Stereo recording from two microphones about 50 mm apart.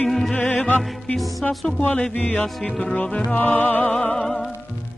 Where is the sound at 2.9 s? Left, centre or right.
Left.